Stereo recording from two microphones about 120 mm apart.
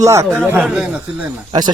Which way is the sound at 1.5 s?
40° right (ahead or behind).